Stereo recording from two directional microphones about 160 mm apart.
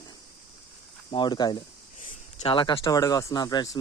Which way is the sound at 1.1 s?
30° left (ahead or behind).